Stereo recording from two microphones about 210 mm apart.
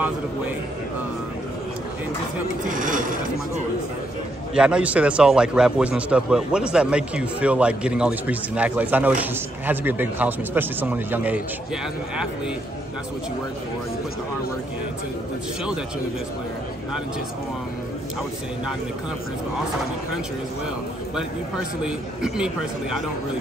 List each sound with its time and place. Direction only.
2.7 s a sound: 40° right (ahead or behind)
4.6 s a man's voice: 5° right (ahead or behind)
21.8 s a man's voice: 5° right (ahead or behind)